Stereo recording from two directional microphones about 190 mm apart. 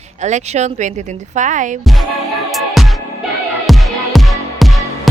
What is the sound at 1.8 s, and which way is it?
Music, centre (ahead or behind).